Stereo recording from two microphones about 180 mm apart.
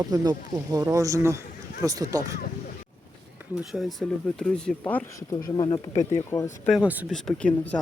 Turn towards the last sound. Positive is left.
turn(degrees=5)  # may be behind; listen again after turning